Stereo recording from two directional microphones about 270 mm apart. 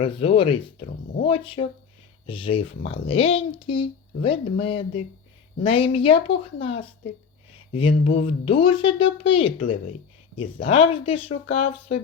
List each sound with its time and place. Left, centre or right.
0.0 s speech: centre
9.6 s speech: left
10.3 s speech: centre